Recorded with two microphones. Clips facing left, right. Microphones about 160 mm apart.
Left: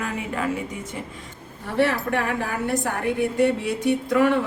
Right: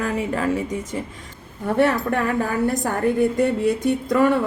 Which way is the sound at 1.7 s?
50° right (ahead or behind).